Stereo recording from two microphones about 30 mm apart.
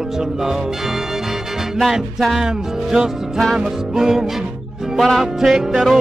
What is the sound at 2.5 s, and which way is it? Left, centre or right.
Speech, centre.